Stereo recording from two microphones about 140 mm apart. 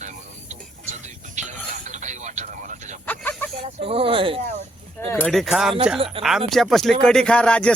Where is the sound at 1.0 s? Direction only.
60° right (ahead or behind).